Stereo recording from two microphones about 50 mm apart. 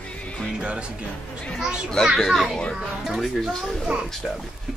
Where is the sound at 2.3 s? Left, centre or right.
Centre.